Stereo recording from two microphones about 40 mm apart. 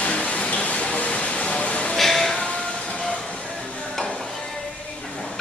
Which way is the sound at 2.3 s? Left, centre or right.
Left.